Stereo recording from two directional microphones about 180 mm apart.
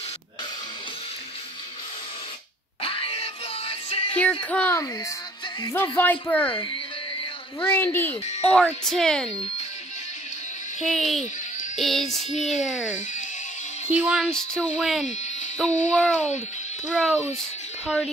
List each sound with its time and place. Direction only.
2.8 s music: 30° left (ahead or behind)
4.1 s music: 10° left (ahead or behind)
4.5 s speech: 10° left (ahead or behind)
7.6 s speech: 10° left (ahead or behind)
8.5 s child singing: 5° left (ahead or behind)
10.8 s child singing: centre (ahead or behind)
13.9 s music: 5° right (ahead or behind)
14.2 s child singing: 5° left (ahead or behind)
15.9 s speech: 5° left (ahead or behind)
16.9 s child singing: 5° left (ahead or behind)